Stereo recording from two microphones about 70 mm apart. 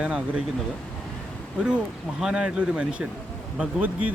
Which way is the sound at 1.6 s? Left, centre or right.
Centre.